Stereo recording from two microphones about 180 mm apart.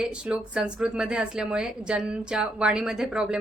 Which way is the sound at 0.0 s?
5° right (ahead or behind).